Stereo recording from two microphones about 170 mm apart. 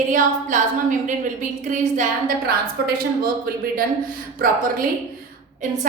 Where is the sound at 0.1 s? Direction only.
50° right (ahead or behind).